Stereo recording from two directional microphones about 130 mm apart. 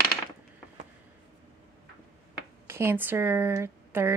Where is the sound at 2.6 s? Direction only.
20° right (ahead or behind).